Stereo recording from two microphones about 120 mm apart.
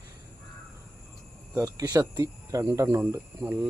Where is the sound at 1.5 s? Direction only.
25° right (ahead or behind).